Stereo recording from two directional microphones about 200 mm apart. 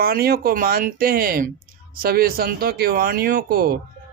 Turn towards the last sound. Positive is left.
turn(degrees=-50)  # may be behind; listen again after turning